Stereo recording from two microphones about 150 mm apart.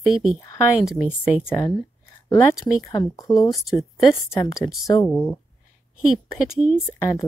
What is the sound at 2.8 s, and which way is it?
Speech, 20° left (ahead or behind).